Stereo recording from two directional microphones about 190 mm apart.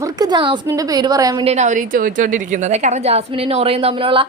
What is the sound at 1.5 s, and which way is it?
A woman's voice, 40° right (ahead or behind).